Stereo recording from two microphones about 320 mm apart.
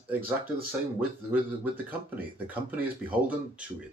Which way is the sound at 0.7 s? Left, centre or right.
Centre.